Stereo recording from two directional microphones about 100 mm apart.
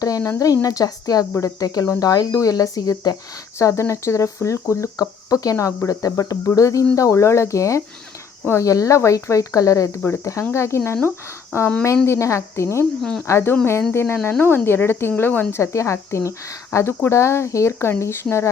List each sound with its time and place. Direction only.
0.0 s speech: 35° left (ahead or behind)
13.0 s speech: 5° left (ahead or behind)
13.2 s speech: 25° left (ahead or behind)